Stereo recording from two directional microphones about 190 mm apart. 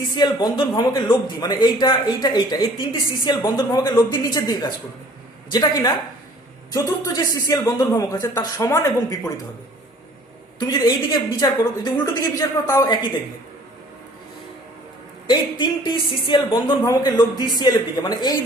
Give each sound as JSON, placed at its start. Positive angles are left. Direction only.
{"t": 0.2, "sound": "a woman's voice", "side_deg": 20}
{"t": 10.6, "sound": "a woman's voice", "side_deg": 20}
{"t": 15.3, "sound": "a woman's voice", "side_deg": 25}